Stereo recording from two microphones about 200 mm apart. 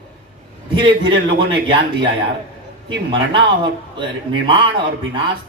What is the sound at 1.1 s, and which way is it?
Speech, 60° right (ahead or behind).